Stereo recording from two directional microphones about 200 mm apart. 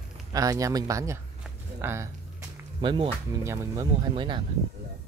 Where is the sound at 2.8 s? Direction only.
25° right (ahead or behind).